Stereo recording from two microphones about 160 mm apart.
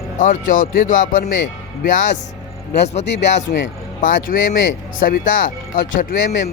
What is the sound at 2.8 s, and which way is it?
Speech, 45° left (ahead or behind).